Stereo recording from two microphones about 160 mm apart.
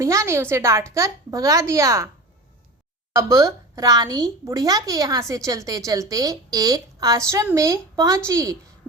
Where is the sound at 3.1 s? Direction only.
20° right (ahead or behind).